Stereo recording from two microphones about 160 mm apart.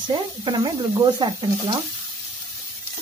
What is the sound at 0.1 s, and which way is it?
Speech, 30° right (ahead or behind).